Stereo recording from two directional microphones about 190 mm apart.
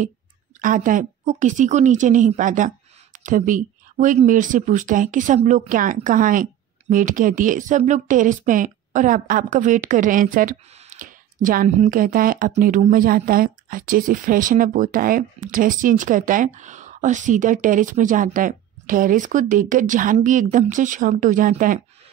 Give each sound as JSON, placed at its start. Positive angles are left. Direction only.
{"t": 0.6, "sound": "a woman's voice", "side_deg": -45}